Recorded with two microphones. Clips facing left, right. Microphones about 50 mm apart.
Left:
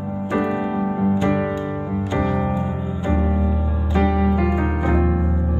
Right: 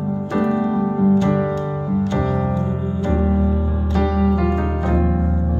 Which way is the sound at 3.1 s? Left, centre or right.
Left.